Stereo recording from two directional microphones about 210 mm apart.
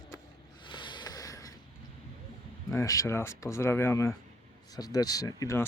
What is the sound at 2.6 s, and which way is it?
Speech, 15° left (ahead or behind).